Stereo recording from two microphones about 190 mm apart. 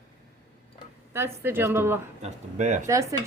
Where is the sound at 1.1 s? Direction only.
10° right (ahead or behind).